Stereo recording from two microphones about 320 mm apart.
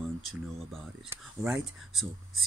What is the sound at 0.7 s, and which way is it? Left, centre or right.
Speech, centre.